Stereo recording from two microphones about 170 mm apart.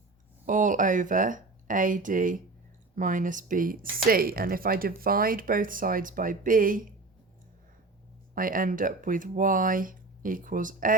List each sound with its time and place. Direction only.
0.4 s speech: 50° right (ahead or behind)
8.4 s speech: 55° right (ahead or behind)